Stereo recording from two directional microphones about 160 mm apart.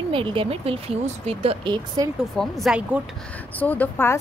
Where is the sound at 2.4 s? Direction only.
Centre (ahead or behind).